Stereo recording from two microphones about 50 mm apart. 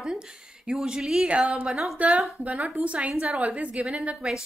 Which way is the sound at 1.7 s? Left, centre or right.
Centre.